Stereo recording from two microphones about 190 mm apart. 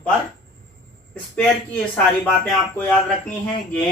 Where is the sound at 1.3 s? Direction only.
10° left (ahead or behind).